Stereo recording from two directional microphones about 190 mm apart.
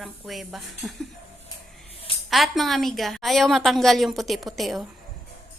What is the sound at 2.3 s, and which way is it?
Speech, centre (ahead or behind).